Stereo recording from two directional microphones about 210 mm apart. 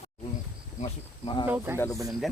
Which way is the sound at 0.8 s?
25° left (ahead or behind).